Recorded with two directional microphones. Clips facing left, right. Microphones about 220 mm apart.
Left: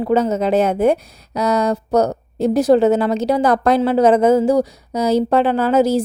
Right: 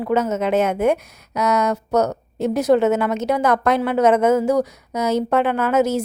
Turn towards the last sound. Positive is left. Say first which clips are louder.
# left 3 dB
turn(degrees=30)  # may be behind; listen again after turning